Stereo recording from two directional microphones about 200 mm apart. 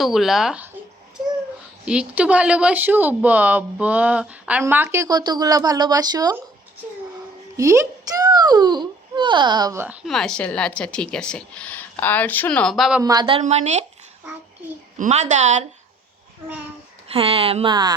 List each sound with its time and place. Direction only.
0.0 s speech: centre (ahead or behind)
1.8 s a woman's voice: 5° right (ahead or behind)
7.5 s a child's voice: 15° right (ahead or behind)
10.1 s speech: 5° left (ahead or behind)
13.0 s a woman's voice: 20° right (ahead or behind); by 13.8 s 35° right (ahead or behind)
14.9 s a woman's voice: 35° right (ahead or behind)
17.1 s a woman's voice: 30° right (ahead or behind)